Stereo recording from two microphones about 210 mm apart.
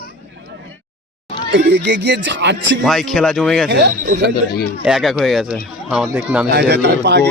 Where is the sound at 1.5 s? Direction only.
50° right (ahead or behind).